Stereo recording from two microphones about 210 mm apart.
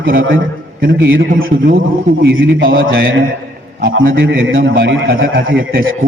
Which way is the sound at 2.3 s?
70° right (ahead or behind).